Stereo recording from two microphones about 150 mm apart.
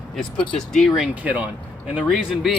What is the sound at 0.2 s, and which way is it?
Speech, centre (ahead or behind).